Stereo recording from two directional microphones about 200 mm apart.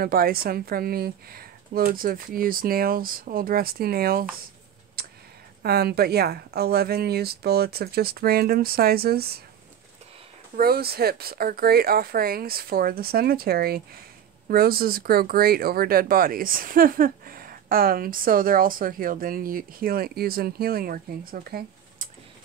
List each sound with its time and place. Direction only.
0.0 s speech: 50° right (ahead or behind)
5.0 s a sound: 50° right (ahead or behind)
5.6 s speech: 50° right (ahead or behind)
10.5 s speech: 50° right (ahead or behind)